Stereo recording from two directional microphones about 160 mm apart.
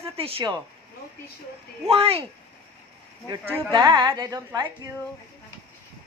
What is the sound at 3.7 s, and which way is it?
Speech, 25° right (ahead or behind).